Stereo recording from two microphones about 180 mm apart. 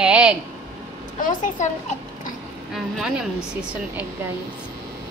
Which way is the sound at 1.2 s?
45° left (ahead or behind).